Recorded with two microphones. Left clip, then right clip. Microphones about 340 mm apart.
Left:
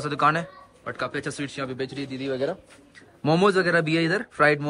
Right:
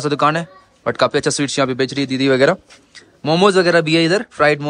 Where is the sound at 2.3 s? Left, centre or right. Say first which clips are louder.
Right 14 dB; right.